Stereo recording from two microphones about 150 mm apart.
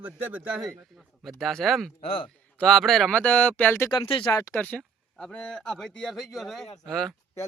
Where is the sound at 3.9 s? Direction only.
35° left (ahead or behind).